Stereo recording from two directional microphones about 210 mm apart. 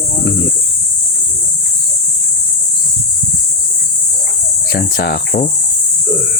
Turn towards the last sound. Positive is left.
turn(degrees=45)  # may be behind; listen again after turning